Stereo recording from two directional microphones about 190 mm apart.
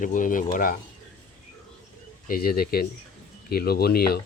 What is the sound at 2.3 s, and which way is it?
Speech, 50° left (ahead or behind).